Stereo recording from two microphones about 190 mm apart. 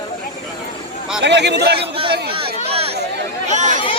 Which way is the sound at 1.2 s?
65° right (ahead or behind).